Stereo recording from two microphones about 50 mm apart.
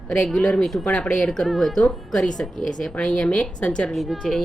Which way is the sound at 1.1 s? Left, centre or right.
Centre.